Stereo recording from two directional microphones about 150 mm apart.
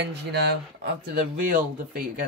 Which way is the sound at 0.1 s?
90° right.